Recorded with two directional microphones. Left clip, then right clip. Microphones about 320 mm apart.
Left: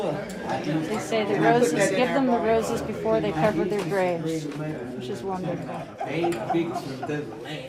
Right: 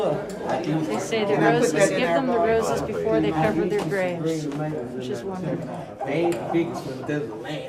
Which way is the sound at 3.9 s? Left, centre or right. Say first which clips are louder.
Even; centre.